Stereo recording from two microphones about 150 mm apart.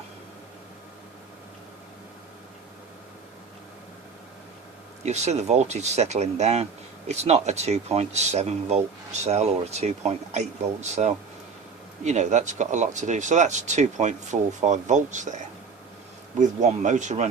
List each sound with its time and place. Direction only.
5.0 s speech: 50° right (ahead or behind)